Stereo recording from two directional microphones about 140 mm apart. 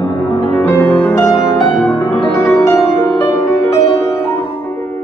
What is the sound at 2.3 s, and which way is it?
Music, 20° left (ahead or behind).